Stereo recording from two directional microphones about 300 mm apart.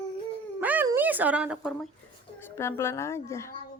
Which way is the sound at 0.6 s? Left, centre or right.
Centre.